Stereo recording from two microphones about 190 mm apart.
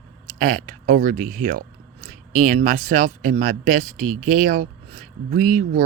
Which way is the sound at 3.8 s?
Centre (ahead or behind).